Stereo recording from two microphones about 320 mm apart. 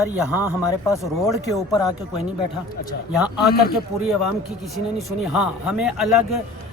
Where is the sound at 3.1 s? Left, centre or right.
Centre.